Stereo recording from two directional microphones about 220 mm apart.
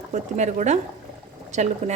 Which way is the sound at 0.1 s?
30° right (ahead or behind).